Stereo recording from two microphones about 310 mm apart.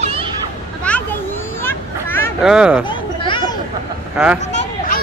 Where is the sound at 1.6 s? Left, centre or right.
Centre.